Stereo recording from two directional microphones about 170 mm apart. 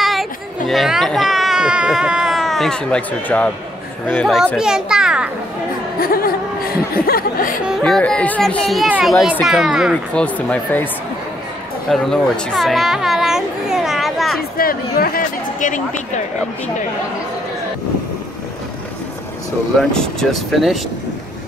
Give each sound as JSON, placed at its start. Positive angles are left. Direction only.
{"t": 0.0, "sound": "speech", "side_deg": 0}
{"t": 4.6, "sound": "a child's voice", "side_deg": -5}
{"t": 5.9, "sound": "speech", "side_deg": 60}
{"t": 7.6, "sound": "speech", "side_deg": 0}
{"t": 10.2, "sound": "speech", "side_deg": 10}
{"t": 11.9, "sound": "children playing", "side_deg": 0}
{"t": 14.6, "sound": "chatter", "side_deg": 60}
{"t": 19.8, "sound": "speech", "side_deg": 5}